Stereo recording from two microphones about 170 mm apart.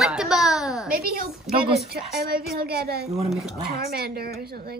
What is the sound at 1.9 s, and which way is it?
A woman's voice, 65° right (ahead or behind).